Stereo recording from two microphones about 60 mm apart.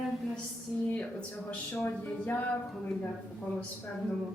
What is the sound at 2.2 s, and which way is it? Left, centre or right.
Speech, left.